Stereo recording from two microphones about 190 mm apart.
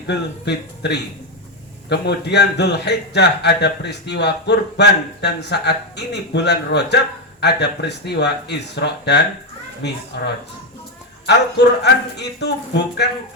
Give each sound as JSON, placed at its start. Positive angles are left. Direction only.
{"t": 0.1, "sound": "a man's voice", "side_deg": 65}
{"t": 11.3, "sound": "a man's voice", "side_deg": 65}